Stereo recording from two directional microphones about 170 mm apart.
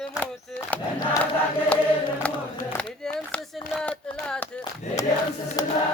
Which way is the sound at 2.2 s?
10° left (ahead or behind).